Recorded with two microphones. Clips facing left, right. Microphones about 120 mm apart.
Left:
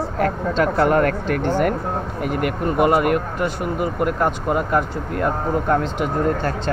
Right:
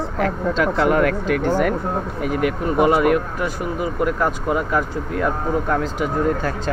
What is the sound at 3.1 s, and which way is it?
Speech, 50° left (ahead or behind).